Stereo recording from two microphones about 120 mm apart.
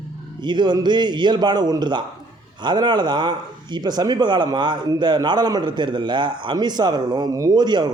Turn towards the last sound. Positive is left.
turn(degrees=-35)  # may be behind; listen again after turning